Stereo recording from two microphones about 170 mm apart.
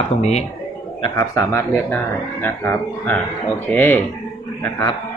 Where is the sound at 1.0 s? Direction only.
20° left (ahead or behind).